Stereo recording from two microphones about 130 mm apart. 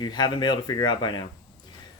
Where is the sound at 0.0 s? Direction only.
35° left (ahead or behind).